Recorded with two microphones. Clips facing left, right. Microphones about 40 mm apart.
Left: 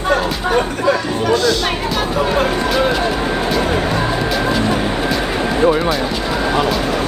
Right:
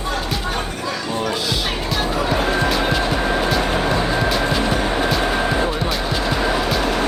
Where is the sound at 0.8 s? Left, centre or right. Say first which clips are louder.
Left 9 dB; left.